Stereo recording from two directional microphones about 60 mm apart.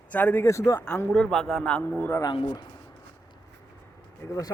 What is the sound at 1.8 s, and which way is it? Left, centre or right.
Speech, left.